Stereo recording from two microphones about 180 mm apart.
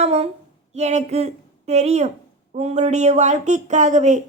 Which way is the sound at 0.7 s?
40° right (ahead or behind).